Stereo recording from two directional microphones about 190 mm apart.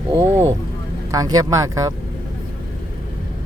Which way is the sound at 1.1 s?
20° right (ahead or behind).